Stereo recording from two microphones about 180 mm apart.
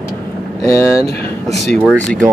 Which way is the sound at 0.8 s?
15° left (ahead or behind).